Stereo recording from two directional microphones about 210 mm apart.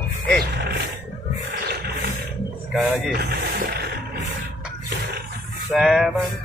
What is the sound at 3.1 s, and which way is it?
Music, 50° right (ahead or behind).